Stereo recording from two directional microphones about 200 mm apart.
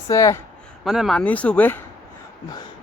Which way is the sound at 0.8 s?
Centre (ahead or behind).